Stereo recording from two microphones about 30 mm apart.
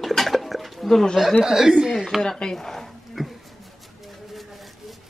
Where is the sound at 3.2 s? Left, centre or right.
Centre.